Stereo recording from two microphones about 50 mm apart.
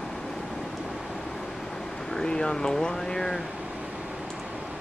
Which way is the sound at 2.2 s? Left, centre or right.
Centre.